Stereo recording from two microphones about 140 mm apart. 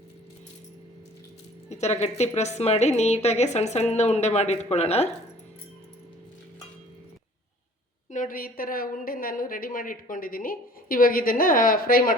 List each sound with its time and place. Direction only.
1.7 s a woman's voice: 50° left (ahead or behind)
8.1 s a woman's voice: 80° left